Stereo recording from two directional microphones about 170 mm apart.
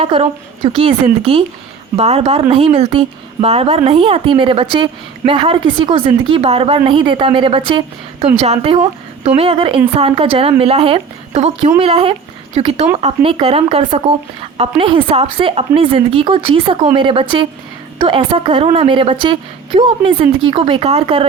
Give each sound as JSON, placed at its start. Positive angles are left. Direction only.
{"t": 0.0, "sound": "a woman's voice", "side_deg": -35}